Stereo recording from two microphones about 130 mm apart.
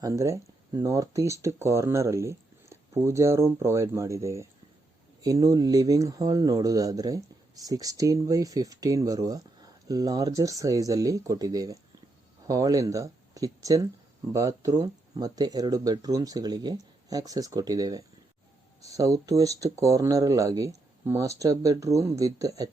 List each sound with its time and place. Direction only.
0.0 s speech: 25° right (ahead or behind)